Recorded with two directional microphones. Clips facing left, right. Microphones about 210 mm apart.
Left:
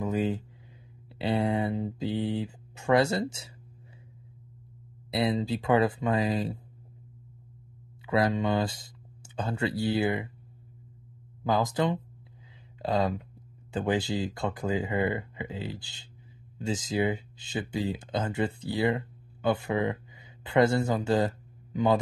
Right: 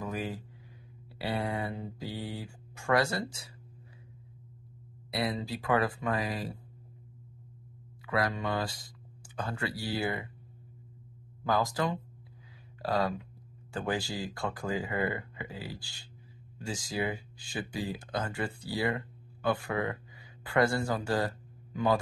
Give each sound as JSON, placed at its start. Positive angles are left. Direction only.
{"t": 0.0, "sound": "a sound", "side_deg": 25}
{"t": 1.1, "sound": "speech", "side_deg": 25}
{"t": 5.1, "sound": "speech", "side_deg": 25}
{"t": 8.1, "sound": "speech", "side_deg": 25}
{"t": 11.4, "sound": "speech", "side_deg": 20}